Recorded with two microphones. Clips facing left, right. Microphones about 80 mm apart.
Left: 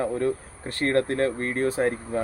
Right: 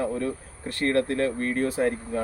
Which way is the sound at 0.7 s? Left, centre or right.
Left.